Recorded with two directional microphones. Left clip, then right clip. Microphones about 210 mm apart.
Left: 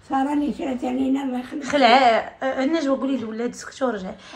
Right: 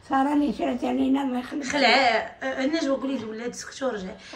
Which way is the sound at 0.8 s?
10° right (ahead or behind).